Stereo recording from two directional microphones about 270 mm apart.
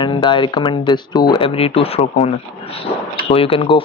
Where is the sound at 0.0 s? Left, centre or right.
Centre.